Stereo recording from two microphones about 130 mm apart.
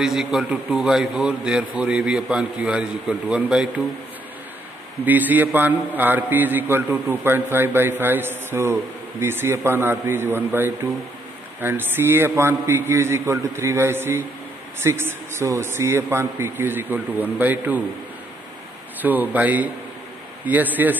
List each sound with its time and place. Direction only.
0.0 s a man's voice: 5° right (ahead or behind)
5.0 s a man's voice: 15° right (ahead or behind)
18.9 s a man's voice: 15° right (ahead or behind)